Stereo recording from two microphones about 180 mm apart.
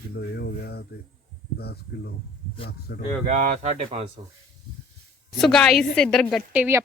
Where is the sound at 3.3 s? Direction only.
45° right (ahead or behind).